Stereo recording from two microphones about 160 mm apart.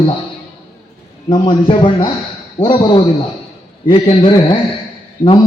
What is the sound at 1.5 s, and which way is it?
Speech, 35° left (ahead or behind).